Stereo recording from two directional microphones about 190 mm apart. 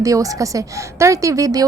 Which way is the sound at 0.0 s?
15° right (ahead or behind).